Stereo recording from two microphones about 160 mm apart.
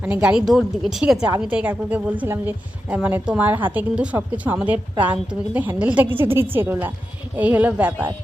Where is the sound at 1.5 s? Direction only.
10° right (ahead or behind).